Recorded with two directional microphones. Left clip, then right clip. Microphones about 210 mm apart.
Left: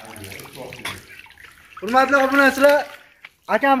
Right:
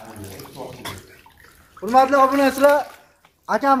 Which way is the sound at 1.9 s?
40° left (ahead or behind).